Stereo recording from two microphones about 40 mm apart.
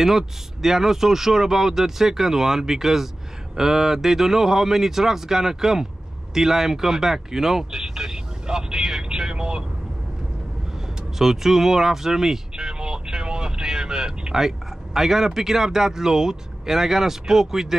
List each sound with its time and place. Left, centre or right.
0.0 s speech: centre
11.1 s speech: centre